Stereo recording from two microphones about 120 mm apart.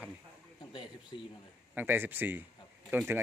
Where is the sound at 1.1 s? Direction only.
50° left (ahead or behind).